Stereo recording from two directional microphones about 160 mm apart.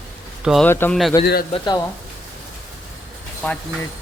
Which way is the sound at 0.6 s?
15° left (ahead or behind).